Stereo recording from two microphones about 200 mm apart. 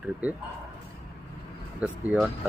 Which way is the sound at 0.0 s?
5° right (ahead or behind).